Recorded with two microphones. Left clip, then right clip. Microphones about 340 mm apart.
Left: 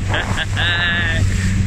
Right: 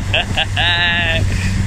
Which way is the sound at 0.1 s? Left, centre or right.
Centre.